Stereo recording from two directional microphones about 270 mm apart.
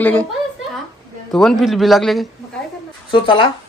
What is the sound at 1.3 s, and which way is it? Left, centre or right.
Speech, centre.